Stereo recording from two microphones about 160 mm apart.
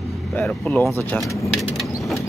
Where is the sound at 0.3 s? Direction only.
10° left (ahead or behind).